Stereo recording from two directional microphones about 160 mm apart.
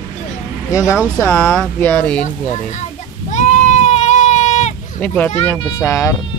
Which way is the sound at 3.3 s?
50° left (ahead or behind).